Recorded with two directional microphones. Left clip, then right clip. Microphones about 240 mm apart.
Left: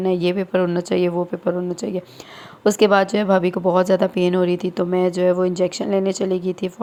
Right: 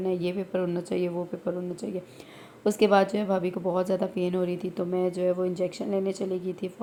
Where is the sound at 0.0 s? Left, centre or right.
Left.